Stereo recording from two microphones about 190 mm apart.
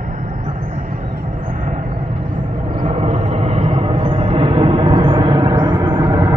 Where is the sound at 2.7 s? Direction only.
30° right (ahead or behind).